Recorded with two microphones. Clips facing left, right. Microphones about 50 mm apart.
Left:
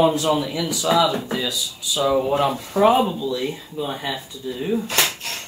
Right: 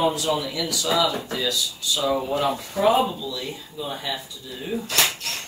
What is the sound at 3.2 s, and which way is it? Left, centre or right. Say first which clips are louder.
Speech: left 7 dB; left.